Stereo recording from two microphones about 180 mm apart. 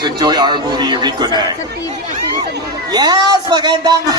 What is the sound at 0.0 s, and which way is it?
Speech, 25° right (ahead or behind).